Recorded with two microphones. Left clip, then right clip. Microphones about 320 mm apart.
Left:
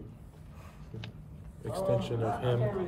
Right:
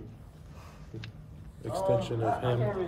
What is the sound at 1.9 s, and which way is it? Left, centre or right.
Speech, centre.